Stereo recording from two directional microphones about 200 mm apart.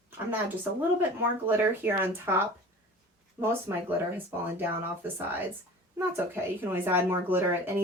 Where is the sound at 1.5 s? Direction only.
10° right (ahead or behind).